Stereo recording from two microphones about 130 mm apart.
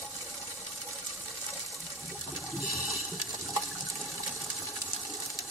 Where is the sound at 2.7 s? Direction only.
Centre (ahead or behind).